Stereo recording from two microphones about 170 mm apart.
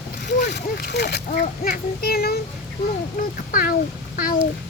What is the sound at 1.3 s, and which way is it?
A child's voice, 55° left (ahead or behind).